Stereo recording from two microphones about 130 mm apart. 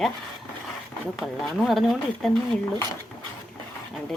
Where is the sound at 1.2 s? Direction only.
Centre (ahead or behind).